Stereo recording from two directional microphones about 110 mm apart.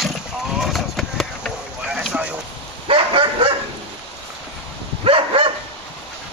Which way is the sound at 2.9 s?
50° right (ahead or behind).